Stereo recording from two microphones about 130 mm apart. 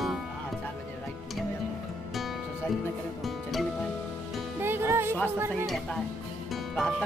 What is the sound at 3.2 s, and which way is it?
Music, centre (ahead or behind).